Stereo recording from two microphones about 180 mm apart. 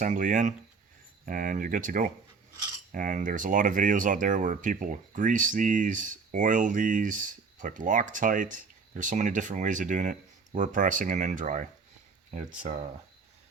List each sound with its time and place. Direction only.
0.0 s speech: 45° right (ahead or behind)